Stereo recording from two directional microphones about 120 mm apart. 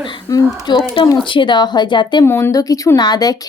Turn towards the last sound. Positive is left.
turn(degrees=35)  # may be behind; listen again after turning